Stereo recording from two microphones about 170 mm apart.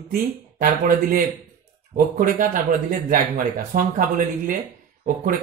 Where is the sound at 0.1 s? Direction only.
55° right (ahead or behind).